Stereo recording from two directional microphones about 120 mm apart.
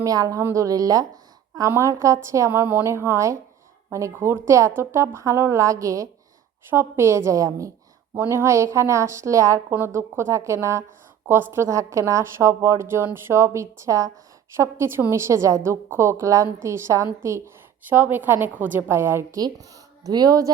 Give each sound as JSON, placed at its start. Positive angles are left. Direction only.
{"t": 0.0, "sound": "a woman's voice", "side_deg": -30}
{"t": 20.1, "sound": "a woman's voice", "side_deg": -30}